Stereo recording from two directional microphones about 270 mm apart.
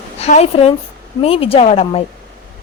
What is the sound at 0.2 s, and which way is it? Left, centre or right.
Speech, left.